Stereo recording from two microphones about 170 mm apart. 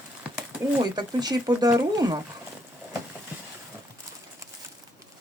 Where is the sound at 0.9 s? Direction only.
25° right (ahead or behind).